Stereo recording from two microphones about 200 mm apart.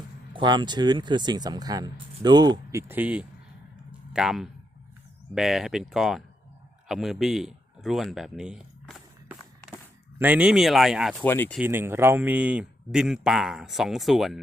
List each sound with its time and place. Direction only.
0.3 s speech: 20° right (ahead or behind); by 9.0 s 5° right (ahead or behind)
10.2 s speech: 5° right (ahead or behind)
11.2 s speech: 10° left (ahead or behind)
11.5 s speech: 10° right (ahead or behind)